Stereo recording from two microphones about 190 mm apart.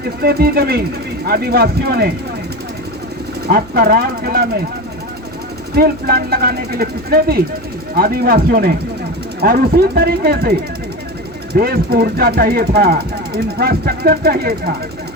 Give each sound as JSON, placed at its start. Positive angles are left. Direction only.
{"t": 0.2, "sound": "speech", "side_deg": -55}
{"t": 3.4, "sound": "speech", "side_deg": -50}
{"t": 5.7, "sound": "speech", "side_deg": -55}
{"t": 11.5, "sound": "speech", "side_deg": -55}